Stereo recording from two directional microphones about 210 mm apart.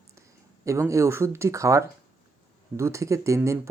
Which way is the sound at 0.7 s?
15° right (ahead or behind).